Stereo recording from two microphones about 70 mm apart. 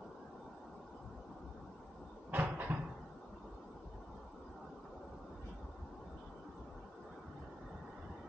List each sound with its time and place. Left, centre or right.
2.3 s cupboard open or close: right